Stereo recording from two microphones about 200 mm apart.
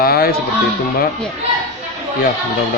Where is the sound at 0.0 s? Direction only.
50° left (ahead or behind).